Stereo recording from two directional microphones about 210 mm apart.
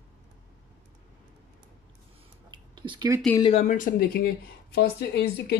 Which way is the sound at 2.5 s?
20° right (ahead or behind).